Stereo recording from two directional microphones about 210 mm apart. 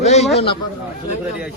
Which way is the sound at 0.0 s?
30° left (ahead or behind).